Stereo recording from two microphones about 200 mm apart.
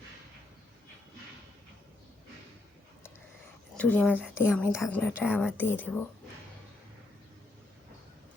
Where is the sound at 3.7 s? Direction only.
5° left (ahead or behind).